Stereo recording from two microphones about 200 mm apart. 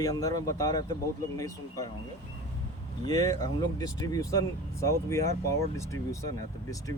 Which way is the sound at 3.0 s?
15° left (ahead or behind).